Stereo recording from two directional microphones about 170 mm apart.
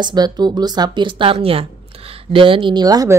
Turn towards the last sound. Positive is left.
turn(degrees=-20)  # may be behind; listen again after turning